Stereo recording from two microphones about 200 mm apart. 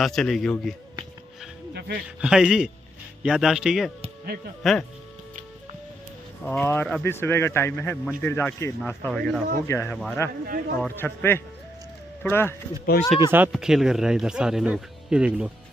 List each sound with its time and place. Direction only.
0.0 s speech: centre (ahead or behind)
1.7 s a sound: 55° right (ahead or behind)
2.0 s speech: 5° right (ahead or behind)
6.4 s speech: 5° left (ahead or behind)
12.9 s speech: 50° left (ahead or behind)
13.5 s speech: centre (ahead or behind)